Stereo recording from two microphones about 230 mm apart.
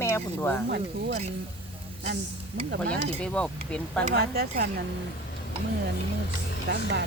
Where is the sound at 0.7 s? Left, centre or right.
Right.